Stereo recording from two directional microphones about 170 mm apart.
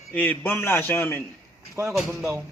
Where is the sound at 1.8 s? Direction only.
15° right (ahead or behind).